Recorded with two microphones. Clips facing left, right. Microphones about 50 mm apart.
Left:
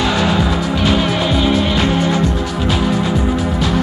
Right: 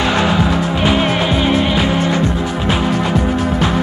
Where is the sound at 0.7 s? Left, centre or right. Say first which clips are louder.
Even; right.